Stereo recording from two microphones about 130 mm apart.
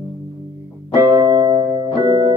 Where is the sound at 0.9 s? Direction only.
25° right (ahead or behind).